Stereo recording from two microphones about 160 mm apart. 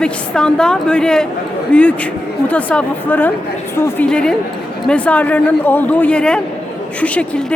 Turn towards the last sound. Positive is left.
turn(degrees=10)  # may be behind; listen again after turning